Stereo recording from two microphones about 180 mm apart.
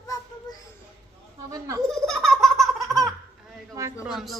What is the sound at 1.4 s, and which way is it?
Speech, 20° right (ahead or behind).